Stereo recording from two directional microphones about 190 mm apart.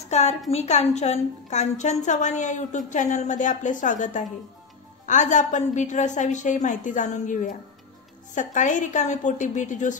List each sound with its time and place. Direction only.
0.1 s a woman's voice: 35° left (ahead or behind)